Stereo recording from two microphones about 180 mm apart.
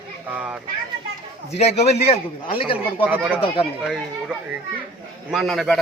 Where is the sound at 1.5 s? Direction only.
35° left (ahead or behind).